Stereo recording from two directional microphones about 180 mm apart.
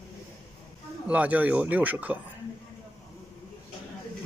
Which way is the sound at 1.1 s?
10° right (ahead or behind).